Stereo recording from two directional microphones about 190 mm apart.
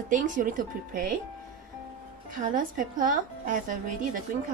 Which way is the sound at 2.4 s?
45° right (ahead or behind).